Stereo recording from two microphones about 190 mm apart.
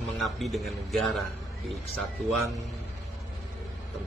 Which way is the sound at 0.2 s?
Centre (ahead or behind).